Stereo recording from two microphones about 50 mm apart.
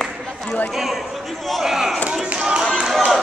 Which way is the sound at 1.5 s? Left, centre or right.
Centre.